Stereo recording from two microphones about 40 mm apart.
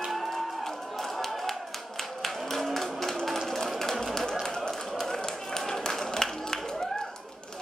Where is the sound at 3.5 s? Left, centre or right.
Centre.